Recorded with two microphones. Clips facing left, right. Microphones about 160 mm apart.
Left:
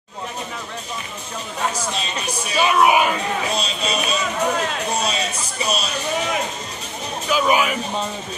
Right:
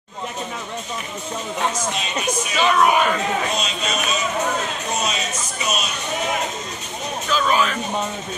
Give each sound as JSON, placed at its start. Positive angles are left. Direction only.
{"t": 2.5, "sound": "speech", "side_deg": 10}
{"t": 3.5, "sound": "speech", "side_deg": 35}
{"t": 7.2, "sound": "speech", "side_deg": 10}